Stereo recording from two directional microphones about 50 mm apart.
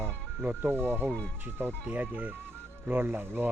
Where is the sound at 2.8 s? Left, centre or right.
Right.